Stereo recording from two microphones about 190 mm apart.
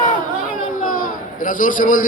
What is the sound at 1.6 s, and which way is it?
Speech, 45° left (ahead or behind).